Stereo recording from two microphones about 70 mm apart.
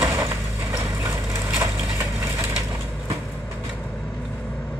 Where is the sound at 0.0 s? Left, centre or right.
Right.